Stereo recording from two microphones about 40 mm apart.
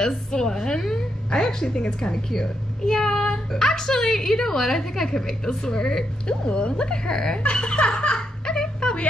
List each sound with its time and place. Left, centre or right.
0.0 s a woman's voice: centre
7.4 s snicker: left